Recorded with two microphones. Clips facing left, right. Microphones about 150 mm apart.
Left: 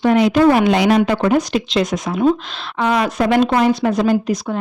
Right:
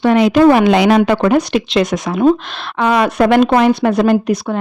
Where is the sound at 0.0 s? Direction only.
85° right.